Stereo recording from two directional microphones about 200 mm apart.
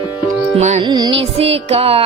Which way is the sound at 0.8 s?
20° right (ahead or behind).